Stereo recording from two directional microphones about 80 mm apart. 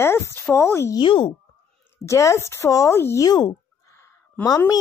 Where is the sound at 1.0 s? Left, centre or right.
Left.